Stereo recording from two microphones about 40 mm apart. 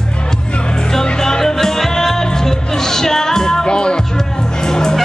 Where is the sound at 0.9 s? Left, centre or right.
Centre.